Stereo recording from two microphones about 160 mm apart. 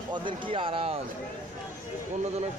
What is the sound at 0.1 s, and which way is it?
Speech, 30° right (ahead or behind).